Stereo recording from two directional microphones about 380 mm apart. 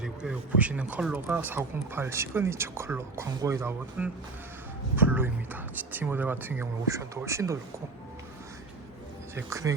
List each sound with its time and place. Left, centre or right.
0.0 s a man's voice: centre
9.3 s speech: centre